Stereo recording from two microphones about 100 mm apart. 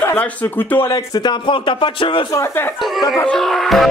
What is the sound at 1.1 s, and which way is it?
Speech, 45° left (ahead or behind).